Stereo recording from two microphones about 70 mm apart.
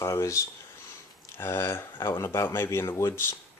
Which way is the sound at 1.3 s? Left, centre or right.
Left.